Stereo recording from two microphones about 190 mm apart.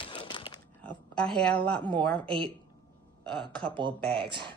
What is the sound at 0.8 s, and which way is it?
A woman's voice, 5° left (ahead or behind).